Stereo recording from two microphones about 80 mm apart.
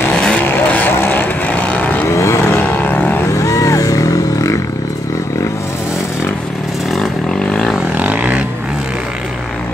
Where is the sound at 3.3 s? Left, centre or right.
Left.